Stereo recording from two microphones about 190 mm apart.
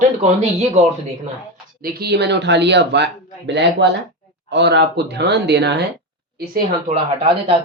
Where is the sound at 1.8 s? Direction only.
55° right (ahead or behind).